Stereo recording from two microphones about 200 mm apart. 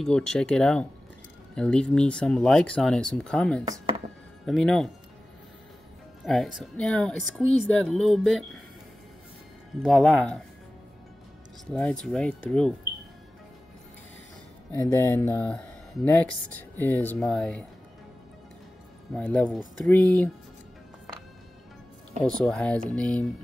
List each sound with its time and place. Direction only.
0.0 s speech: 5° left (ahead or behind)
3.6 s speech: 20° right (ahead or behind)
4.5 s speech: centre (ahead or behind)
6.2 s speech: centre (ahead or behind)
9.8 s speech: 5° left (ahead or behind)
11.7 s speech: 5° left (ahead or behind)
14.7 s speech: 15° left (ahead or behind)
19.1 s speech: 5° left (ahead or behind)
22.4 s speech: 5° left (ahead or behind)